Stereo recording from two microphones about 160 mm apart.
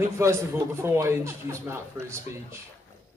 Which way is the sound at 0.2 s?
15° right (ahead or behind).